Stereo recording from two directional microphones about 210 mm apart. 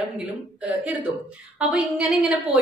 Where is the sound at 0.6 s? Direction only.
5° right (ahead or behind).